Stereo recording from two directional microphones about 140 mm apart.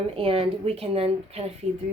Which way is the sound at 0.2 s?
40° right (ahead or behind).